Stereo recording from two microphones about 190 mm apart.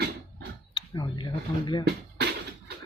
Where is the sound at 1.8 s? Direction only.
60° right (ahead or behind).